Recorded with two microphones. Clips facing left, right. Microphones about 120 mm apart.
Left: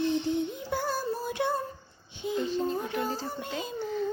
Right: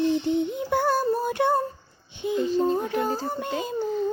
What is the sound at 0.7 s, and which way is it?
Child singing, 65° right (ahead or behind).